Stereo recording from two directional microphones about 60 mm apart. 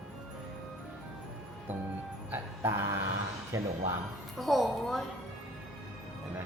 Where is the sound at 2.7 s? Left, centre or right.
Right.